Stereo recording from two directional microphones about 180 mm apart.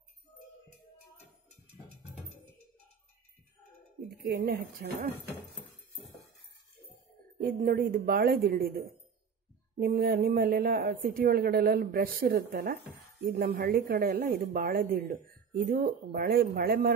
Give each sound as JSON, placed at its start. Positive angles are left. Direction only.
{"t": 4.2, "sound": "speech", "side_deg": -60}
{"t": 7.3, "sound": "speech", "side_deg": -50}